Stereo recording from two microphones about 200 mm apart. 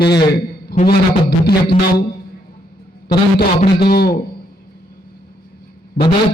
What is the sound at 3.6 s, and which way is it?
Speech, 25° left (ahead or behind).